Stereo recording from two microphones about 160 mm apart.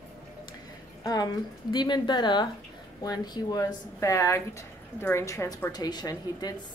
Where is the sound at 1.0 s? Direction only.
25° left (ahead or behind).